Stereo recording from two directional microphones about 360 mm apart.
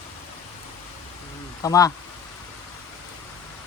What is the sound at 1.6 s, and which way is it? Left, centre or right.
Speech, centre.